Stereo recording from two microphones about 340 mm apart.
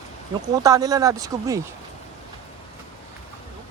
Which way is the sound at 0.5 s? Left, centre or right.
Centre.